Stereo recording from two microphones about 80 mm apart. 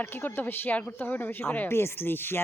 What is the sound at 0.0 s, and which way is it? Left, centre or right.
Speech, left.